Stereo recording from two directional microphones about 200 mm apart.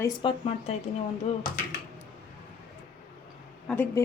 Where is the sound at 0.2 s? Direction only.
30° left (ahead or behind).